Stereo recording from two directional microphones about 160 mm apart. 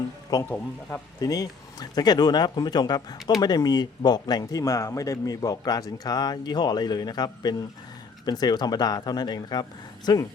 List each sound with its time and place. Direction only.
0.5 s speech: 10° left (ahead or behind)
1.2 s speech: 25° left (ahead or behind)